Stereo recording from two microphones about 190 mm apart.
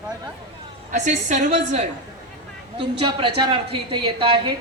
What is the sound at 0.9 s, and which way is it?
Speech, 40° right (ahead or behind).